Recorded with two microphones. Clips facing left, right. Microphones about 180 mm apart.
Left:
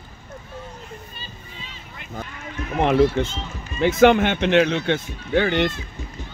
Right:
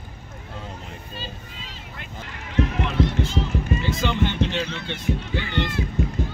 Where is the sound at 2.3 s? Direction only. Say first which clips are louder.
Right 8 dB; 85° right.